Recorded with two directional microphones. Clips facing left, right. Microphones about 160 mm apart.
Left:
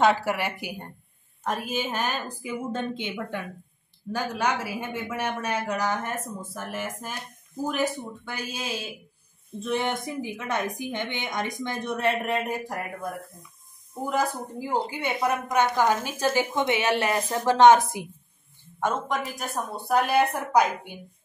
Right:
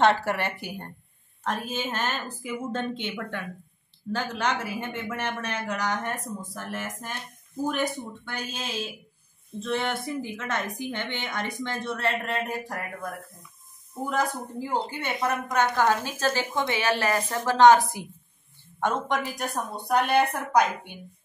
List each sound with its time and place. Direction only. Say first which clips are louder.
0.0 s a woman's voice: even; 5° left (ahead or behind)
8.3 s a woman's voice: left 2 dB; 10° left (ahead or behind)
18.8 s a woman's voice: right 1 dB; centre (ahead or behind)